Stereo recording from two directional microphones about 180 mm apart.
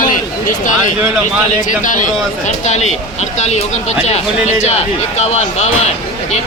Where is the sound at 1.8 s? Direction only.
45° left (ahead or behind).